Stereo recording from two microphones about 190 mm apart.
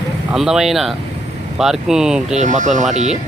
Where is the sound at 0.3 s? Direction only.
Centre (ahead or behind).